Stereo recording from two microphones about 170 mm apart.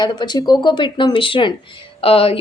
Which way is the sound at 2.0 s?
35° left (ahead or behind).